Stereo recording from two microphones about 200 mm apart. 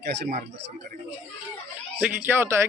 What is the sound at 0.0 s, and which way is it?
Speech, 55° right (ahead or behind).